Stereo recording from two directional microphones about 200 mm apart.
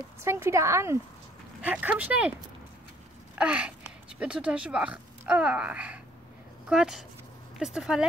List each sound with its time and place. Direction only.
0.2 s speech: 15° right (ahead or behind)
3.3 s speech: 5° right (ahead or behind)